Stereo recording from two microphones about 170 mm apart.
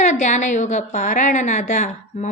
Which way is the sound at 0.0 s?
45° left (ahead or behind).